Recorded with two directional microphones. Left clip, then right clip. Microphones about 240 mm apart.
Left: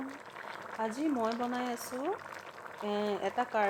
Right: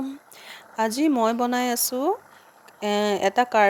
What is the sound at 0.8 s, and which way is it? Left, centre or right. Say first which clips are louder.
Speech: right 12 dB; right.